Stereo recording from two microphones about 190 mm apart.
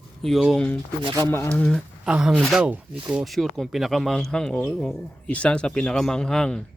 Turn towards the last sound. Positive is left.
turn(degrees=5)  # may be behind; listen again after turning